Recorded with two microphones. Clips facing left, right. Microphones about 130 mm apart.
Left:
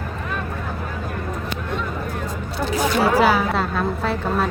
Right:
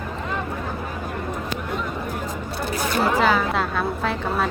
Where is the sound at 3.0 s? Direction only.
10° left (ahead or behind).